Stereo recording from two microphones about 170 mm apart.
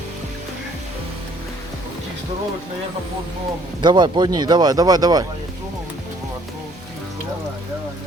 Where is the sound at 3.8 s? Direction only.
25° right (ahead or behind).